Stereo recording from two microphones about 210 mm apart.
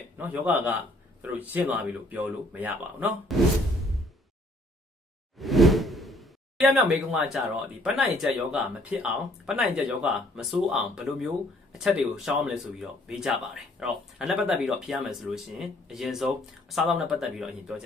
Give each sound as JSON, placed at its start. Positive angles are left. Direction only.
{"t": 0.2, "sound": "speech", "side_deg": -10}
{"t": 5.4, "sound": "whoosh", "side_deg": 0}
{"t": 7.8, "sound": "speech", "side_deg": 0}